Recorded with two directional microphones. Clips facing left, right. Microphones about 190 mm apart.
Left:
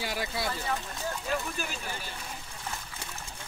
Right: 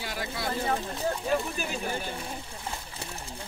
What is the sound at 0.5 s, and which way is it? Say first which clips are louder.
Speech: right 4 dB; 30° right (ahead or behind).